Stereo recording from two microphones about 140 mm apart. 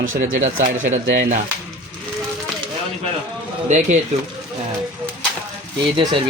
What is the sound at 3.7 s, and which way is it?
Speech, 55° right (ahead or behind).